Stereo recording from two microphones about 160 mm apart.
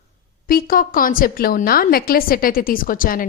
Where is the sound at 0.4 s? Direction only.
65° left (ahead or behind).